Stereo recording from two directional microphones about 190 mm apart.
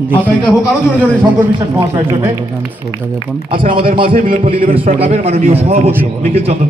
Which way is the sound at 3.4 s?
25° right (ahead or behind).